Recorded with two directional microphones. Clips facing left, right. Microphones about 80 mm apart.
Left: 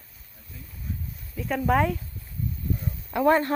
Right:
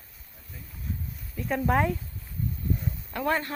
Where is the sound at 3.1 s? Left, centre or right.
Left.